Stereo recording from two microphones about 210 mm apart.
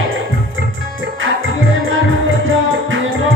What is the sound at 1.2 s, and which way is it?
Music, 70° right (ahead or behind).